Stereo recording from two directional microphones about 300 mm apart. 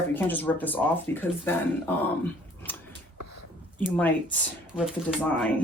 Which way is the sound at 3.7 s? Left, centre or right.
Centre.